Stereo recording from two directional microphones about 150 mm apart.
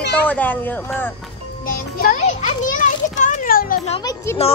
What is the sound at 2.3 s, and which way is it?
Children playing, 55° left (ahead or behind).